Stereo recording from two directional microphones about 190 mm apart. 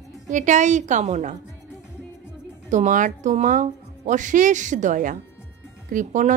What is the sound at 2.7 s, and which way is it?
A woman's voice, 40° right (ahead or behind).